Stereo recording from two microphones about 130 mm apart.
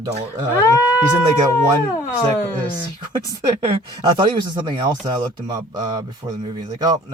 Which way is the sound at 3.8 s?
35° right (ahead or behind).